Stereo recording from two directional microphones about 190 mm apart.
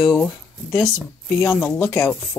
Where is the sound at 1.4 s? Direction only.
15° left (ahead or behind).